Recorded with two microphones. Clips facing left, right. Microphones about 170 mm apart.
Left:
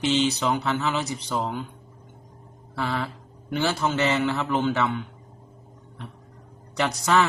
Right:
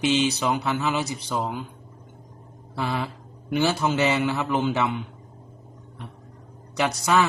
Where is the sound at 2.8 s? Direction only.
15° right (ahead or behind).